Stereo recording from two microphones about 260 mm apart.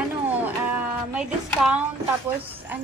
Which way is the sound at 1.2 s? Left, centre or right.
Centre.